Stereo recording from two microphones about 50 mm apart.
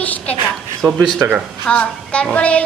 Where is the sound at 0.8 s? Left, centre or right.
Right.